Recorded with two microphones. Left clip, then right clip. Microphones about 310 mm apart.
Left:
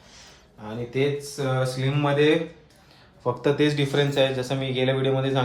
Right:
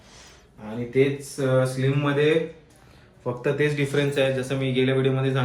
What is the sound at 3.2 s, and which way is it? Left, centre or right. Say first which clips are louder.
A man's voice: left 2 dB; left.